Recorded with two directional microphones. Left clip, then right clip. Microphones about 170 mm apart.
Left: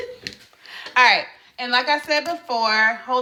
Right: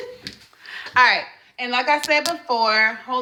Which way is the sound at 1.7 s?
20° left (ahead or behind).